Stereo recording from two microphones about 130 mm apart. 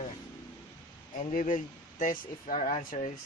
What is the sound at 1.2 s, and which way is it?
Speech, 85° left.